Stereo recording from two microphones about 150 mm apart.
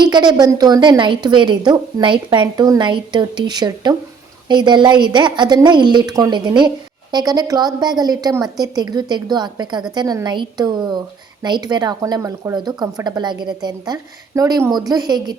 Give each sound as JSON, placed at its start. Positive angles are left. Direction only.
{"t": 0.0, "sound": "a woman's voice", "side_deg": -30}